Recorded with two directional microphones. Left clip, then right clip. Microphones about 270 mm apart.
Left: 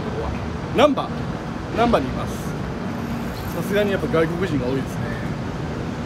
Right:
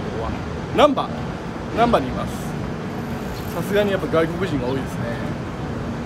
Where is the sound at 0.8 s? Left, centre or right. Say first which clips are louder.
Right 1 dB; centre.